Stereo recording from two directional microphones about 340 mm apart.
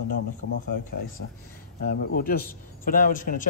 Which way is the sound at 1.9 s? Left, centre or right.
Left.